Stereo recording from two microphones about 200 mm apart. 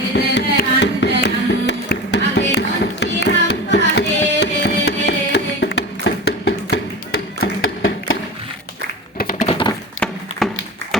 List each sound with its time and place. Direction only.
0.3 s music: 60° left (ahead or behind)
7.6 s a sound: 80° left
9.1 s tap: 45° left (ahead or behind)
9.5 s tap: 25° left (ahead or behind)
10.4 s tap: centre (ahead or behind)